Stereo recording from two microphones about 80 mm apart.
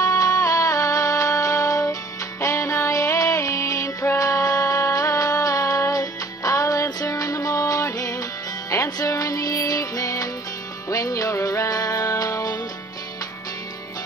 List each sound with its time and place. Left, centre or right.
0.0 s music: left